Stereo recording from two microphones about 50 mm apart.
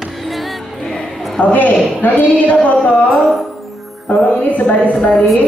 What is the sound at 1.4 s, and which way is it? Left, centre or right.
A woman's voice, left.